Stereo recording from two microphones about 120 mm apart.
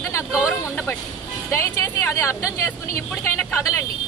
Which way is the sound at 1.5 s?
20° left (ahead or behind).